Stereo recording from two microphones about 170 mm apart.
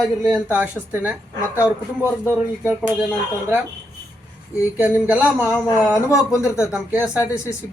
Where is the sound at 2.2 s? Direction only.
10° right (ahead or behind).